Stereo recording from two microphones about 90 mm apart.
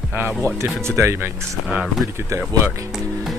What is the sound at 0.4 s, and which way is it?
Speech, 30° right (ahead or behind).